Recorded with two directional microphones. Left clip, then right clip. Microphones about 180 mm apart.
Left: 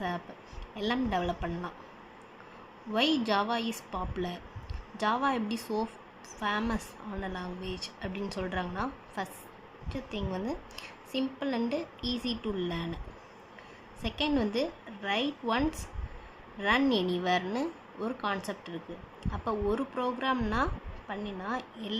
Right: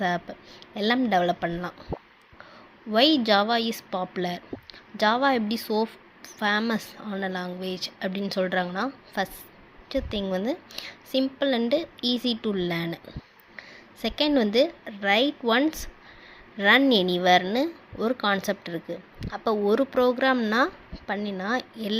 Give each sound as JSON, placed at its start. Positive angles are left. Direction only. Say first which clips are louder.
{"t": 0.7, "sound": "speech", "louder": "right 8 dB", "side_deg": -35}
{"t": 2.9, "sound": "speech", "louder": "right 8 dB", "side_deg": -30}
{"t": 10.3, "sound": "speech", "louder": "right 8 dB", "side_deg": -30}
{"t": 14.0, "sound": "speech", "louder": "right 7 dB", "side_deg": -35}